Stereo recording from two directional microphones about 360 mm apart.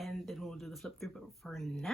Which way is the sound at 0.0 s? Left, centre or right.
Centre.